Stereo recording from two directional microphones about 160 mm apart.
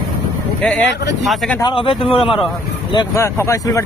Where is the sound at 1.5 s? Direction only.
30° left (ahead or behind).